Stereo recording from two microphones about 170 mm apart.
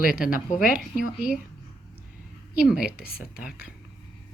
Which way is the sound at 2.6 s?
5° right (ahead or behind).